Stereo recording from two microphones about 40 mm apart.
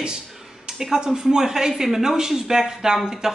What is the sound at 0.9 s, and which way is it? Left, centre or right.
Speech, centre.